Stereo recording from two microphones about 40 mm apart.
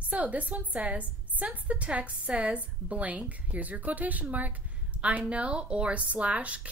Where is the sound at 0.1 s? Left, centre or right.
Right.